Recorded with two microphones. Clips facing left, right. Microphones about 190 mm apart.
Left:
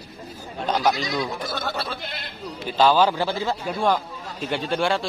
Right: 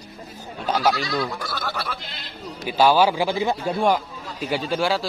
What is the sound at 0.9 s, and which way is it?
Speech, 20° left (ahead or behind).